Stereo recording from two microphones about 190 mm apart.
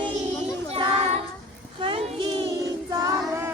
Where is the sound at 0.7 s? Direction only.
30° right (ahead or behind).